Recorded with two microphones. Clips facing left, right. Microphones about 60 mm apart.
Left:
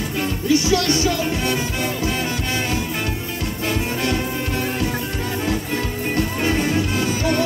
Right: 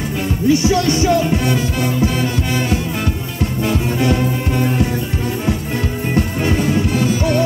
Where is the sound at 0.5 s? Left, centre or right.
Right.